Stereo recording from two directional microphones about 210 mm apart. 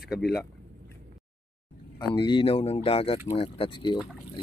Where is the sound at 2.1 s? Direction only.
20° left (ahead or behind).